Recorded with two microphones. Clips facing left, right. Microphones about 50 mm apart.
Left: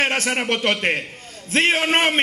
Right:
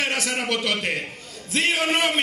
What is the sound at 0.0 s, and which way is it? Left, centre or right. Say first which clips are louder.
A man's voice: left 4 dB; left.